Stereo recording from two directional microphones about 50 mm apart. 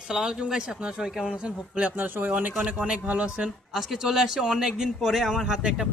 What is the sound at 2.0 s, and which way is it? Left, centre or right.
Speech, right.